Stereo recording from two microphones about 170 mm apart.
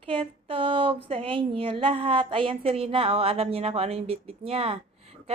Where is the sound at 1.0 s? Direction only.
30° right (ahead or behind).